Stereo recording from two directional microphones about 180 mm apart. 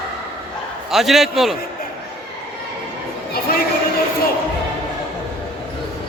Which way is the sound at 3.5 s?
55° left (ahead or behind).